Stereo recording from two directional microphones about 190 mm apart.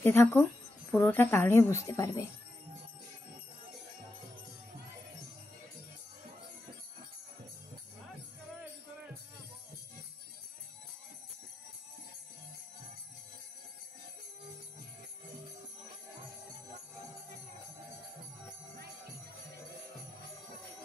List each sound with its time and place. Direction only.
0.0 s speech: 10° left (ahead or behind)